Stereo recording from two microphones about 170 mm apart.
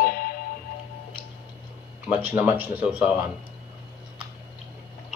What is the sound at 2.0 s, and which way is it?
Speech, 10° right (ahead or behind).